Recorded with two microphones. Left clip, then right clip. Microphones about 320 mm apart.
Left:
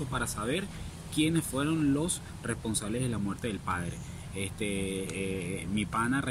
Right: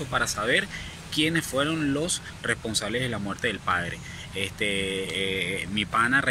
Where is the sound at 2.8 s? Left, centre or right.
Right.